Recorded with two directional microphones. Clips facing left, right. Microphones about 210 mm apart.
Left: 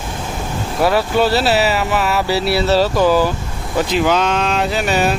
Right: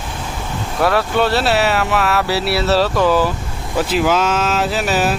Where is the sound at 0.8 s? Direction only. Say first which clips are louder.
Left 1 dB; centre (ahead or behind).